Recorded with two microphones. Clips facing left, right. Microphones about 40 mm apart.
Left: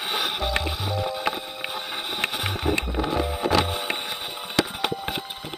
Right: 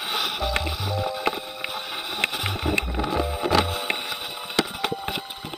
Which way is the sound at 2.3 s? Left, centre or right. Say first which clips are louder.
Even; left.